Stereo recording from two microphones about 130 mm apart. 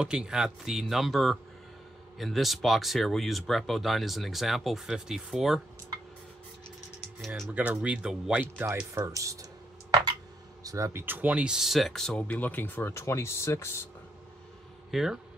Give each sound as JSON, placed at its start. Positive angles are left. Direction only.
{"t": 0.0, "sound": "speech", "side_deg": -5}
{"t": 7.5, "sound": "speech", "side_deg": -10}
{"t": 8.9, "sound": "speech", "side_deg": -25}
{"t": 10.6, "sound": "speech", "side_deg": -25}
{"t": 14.9, "sound": "speech", "side_deg": -5}